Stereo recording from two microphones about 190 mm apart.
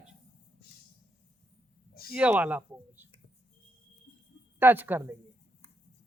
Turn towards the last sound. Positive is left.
turn(degrees=-10)  # may be behind; listen again after turning